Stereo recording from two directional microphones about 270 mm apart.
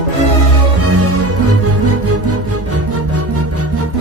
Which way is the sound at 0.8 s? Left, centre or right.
Right.